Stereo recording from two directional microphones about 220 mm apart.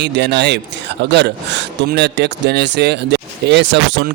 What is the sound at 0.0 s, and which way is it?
Speech, 50° right (ahead or behind).